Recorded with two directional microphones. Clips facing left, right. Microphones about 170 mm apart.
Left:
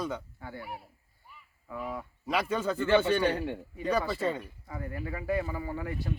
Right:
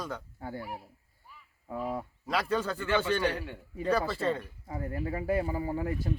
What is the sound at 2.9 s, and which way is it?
Speech, 30° left (ahead or behind).